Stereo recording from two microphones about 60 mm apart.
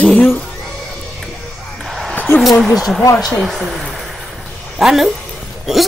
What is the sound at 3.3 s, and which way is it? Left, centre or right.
A woman's voice, centre.